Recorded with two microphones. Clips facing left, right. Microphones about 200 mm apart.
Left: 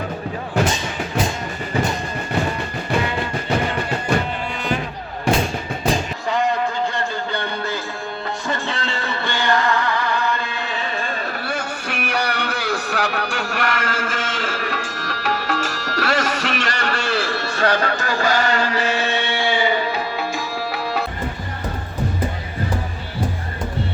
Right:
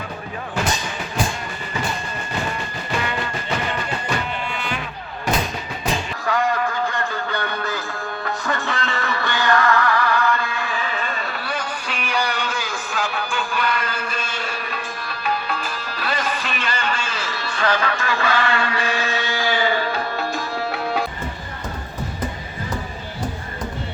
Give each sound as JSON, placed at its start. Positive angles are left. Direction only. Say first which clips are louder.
{"t": 0.6, "sound": "music", "louder": "left 4 dB", "side_deg": 25}
{"t": 5.2, "sound": "music", "louder": "left 4 dB", "side_deg": 30}